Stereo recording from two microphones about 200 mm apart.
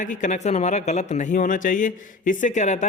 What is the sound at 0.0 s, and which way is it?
Speech, 40° left (ahead or behind).